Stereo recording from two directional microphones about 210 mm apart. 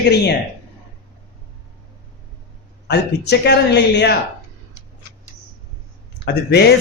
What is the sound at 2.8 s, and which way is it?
A man's voice, 55° left (ahead or behind).